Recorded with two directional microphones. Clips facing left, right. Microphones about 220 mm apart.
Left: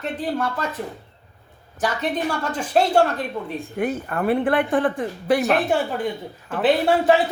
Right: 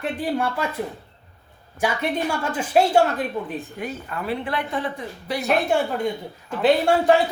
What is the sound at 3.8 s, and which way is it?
A woman's voice, 50° left (ahead or behind).